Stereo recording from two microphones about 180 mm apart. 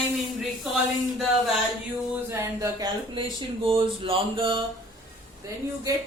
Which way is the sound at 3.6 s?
30° right (ahead or behind).